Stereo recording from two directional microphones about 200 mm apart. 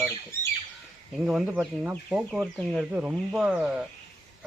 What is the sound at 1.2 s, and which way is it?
Speech, 5° right (ahead or behind).